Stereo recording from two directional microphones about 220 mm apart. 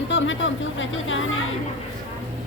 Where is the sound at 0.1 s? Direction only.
60° left (ahead or behind).